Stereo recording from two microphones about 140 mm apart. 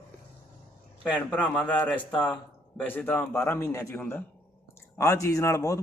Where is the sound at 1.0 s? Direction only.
10° left (ahead or behind).